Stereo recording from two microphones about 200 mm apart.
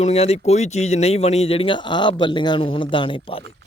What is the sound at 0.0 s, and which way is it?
Speech, 30° left (ahead or behind).